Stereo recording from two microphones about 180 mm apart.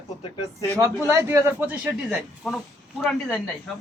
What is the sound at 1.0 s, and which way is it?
A man's voice, 15° right (ahead or behind).